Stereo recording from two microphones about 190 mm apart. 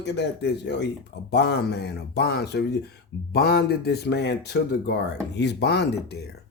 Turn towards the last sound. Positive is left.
turn(degrees=60)  # may be behind; listen again after turning